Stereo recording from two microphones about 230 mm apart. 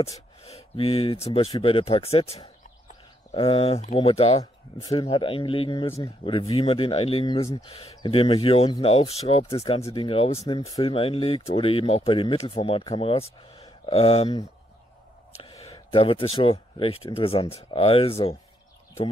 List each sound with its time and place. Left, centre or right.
0.4 s speech: left
15.4 s speech: centre